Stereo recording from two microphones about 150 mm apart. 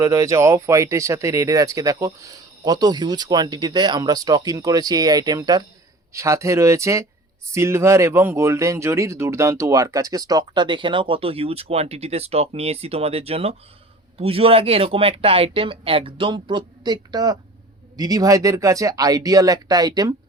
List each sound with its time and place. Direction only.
0.0 s speech: 20° right (ahead or behind)